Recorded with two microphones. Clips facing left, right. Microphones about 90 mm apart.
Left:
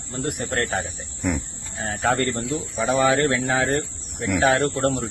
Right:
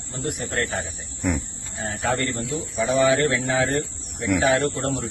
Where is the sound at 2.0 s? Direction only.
45° left (ahead or behind).